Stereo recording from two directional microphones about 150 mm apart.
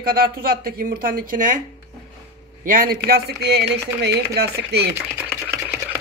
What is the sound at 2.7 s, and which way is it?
Speech, 75° right (ahead or behind).